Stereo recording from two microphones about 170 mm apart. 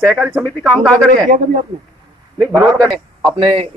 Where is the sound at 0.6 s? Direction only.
5° left (ahead or behind).